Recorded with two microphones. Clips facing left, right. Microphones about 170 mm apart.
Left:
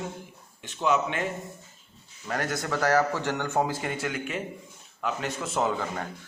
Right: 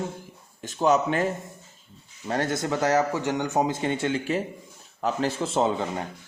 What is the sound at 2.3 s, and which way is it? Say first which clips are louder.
A man's voice: right 4 dB; 25° right (ahead or behind).